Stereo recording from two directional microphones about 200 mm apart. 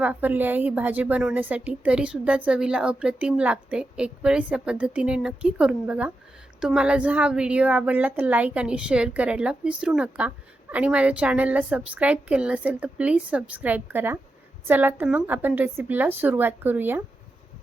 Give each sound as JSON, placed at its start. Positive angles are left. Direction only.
{"t": 0.0, "sound": "a woman's voice", "side_deg": -10}